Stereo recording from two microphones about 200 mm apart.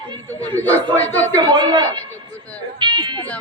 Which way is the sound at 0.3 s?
10° left (ahead or behind).